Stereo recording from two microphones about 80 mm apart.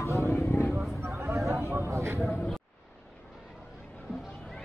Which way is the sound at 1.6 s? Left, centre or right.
Right.